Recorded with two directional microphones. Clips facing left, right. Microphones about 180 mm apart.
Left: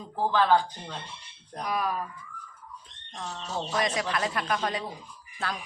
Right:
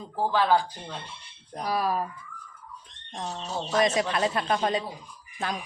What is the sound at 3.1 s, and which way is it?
Speech, 30° right (ahead or behind).